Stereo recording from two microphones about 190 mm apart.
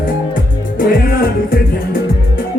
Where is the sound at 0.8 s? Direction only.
50° left (ahead or behind).